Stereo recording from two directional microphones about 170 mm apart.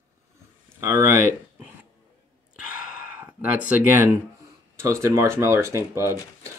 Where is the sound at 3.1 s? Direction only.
10° right (ahead or behind).